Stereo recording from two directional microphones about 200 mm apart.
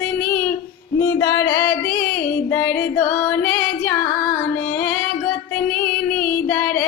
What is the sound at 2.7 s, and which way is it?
Female singing, 10° left (ahead or behind).